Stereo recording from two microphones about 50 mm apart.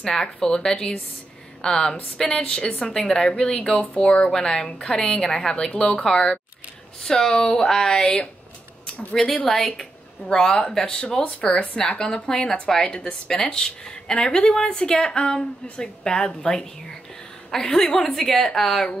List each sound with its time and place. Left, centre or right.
0.0 s a woman's voice: centre
3.9 s a woman's voice: left
4.3 s a woman's voice: centre